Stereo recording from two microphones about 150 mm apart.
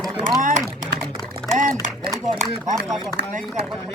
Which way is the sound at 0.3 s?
60° right (ahead or behind).